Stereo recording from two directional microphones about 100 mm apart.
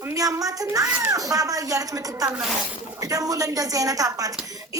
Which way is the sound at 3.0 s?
35° right (ahead or behind).